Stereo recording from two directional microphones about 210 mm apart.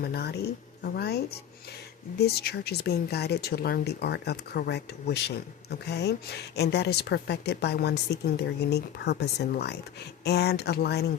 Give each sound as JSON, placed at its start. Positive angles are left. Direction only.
{"t": 0.0, "sound": "a woman's voice", "side_deg": 50}